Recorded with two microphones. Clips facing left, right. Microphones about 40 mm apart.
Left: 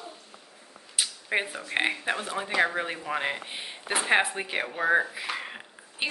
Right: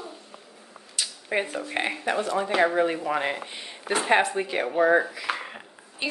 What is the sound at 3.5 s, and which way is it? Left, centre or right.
A woman's voice, centre.